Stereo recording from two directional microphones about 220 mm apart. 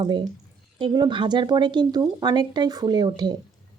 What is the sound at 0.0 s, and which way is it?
Speech, 20° right (ahead or behind).